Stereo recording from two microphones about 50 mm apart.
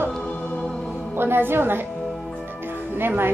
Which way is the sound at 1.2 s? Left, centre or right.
Right.